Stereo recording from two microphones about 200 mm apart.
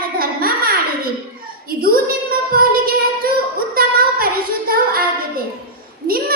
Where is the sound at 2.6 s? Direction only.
45° right (ahead or behind).